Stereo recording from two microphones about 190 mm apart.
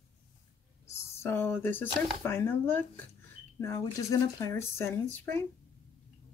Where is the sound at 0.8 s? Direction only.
15° left (ahead or behind).